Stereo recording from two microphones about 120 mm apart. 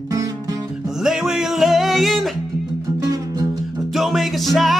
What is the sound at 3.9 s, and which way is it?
Music, centre (ahead or behind).